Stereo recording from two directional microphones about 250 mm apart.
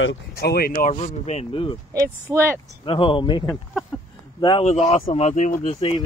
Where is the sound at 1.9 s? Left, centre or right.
Centre.